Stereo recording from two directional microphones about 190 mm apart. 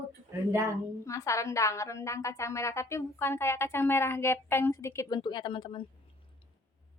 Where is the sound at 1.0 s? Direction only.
15° left (ahead or behind).